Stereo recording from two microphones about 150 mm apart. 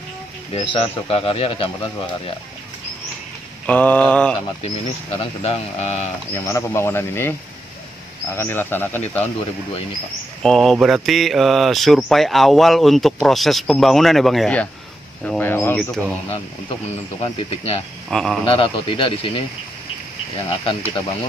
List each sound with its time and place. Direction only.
0.5 s speech: 40° left (ahead or behind)
3.6 s speech: 10° left (ahead or behind)
4.6 s speech: 40° left (ahead or behind)
6.3 s speech: 20° left (ahead or behind)
8.4 s speech: 15° left (ahead or behind)
10.4 s speech: 5° left (ahead or behind)
18.1 s speech: centre (ahead or behind)
18.5 s speech: 35° left (ahead or behind)
20.4 s speech: 35° left (ahead or behind)